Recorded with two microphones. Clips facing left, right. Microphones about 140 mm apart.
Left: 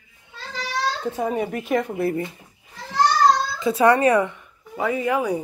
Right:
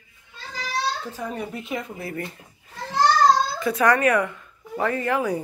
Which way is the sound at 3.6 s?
25° left (ahead or behind).